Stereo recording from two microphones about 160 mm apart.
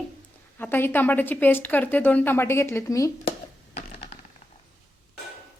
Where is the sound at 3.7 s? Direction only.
45° left (ahead or behind).